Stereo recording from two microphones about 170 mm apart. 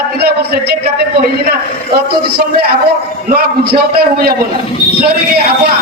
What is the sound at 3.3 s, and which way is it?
A man's voice, 70° right (ahead or behind).